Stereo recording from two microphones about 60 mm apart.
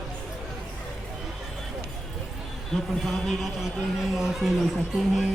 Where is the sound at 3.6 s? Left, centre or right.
Centre.